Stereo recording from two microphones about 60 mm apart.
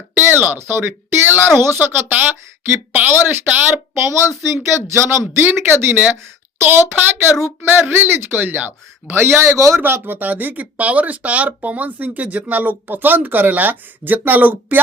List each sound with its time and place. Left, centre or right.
0.1 s speech: right
9.8 s speech: right